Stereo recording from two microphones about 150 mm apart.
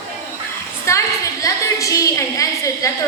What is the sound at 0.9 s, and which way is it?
A woman's voice, 20° left (ahead or behind).